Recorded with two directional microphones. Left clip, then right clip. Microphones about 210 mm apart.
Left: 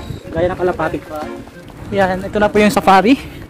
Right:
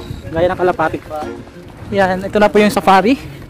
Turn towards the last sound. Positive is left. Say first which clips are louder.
# even
turn(degrees=0)  # may be behind; listen again after turning